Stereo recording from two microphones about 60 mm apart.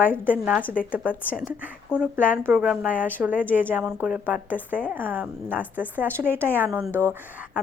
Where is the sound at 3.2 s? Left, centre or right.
Right.